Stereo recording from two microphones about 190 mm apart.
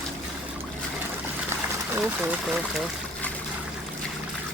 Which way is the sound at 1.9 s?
10° right (ahead or behind).